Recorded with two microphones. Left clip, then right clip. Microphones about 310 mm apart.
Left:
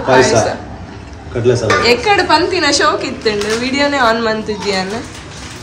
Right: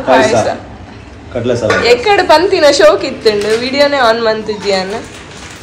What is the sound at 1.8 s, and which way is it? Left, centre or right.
A woman's voice, centre.